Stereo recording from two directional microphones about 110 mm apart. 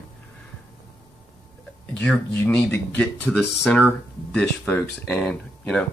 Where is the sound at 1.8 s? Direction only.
10° left (ahead or behind).